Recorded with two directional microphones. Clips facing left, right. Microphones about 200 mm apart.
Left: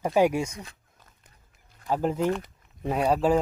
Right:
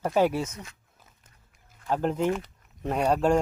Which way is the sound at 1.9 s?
5° left (ahead or behind).